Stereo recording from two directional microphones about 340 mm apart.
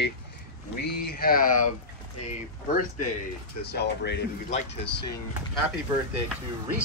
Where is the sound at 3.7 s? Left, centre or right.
Left.